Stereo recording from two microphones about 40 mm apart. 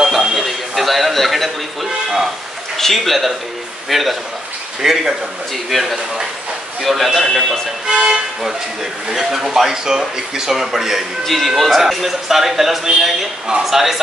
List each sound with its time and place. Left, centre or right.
0.0 s a sound: centre
2.8 s speech: centre
5.7 s speech: centre
7.8 s speech: centre
11.2 s speech: centre